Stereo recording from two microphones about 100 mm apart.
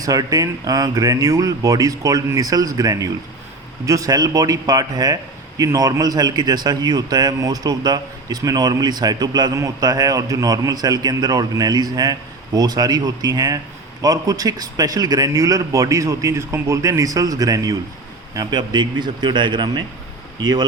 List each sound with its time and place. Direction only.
0.0 s a man's voice: 35° right (ahead or behind)